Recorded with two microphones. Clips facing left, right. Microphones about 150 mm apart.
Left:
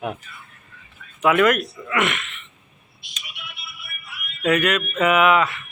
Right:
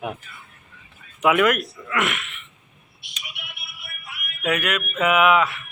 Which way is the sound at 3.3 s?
70° right (ahead or behind).